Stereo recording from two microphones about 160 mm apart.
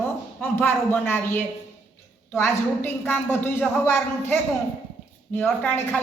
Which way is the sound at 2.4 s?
10° left (ahead or behind).